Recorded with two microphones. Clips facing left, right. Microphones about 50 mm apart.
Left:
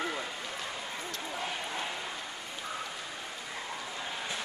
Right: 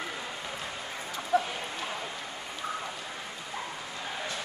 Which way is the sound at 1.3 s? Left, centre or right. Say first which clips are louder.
Right 13 dB; right.